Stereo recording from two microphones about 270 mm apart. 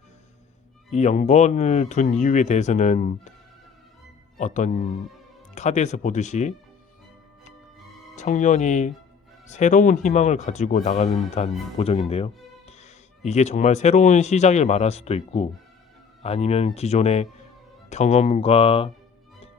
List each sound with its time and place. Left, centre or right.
0.9 s speech: left
4.4 s speech: left
8.1 s speech: left